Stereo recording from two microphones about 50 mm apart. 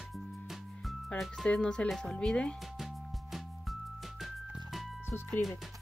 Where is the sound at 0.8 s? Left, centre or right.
Centre.